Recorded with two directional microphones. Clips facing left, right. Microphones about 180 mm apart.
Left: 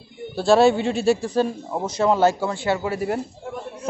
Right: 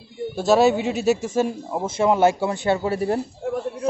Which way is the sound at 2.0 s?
20° right (ahead or behind).